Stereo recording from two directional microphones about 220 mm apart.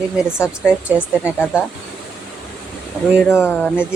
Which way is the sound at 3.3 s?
10° left (ahead or behind).